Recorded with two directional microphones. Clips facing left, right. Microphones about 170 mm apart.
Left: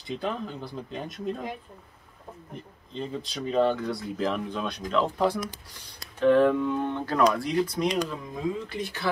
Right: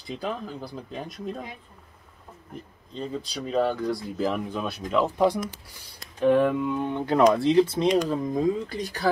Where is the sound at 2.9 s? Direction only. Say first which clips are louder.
Right 1 dB; centre (ahead or behind); by 7.8 s 25° right (ahead or behind).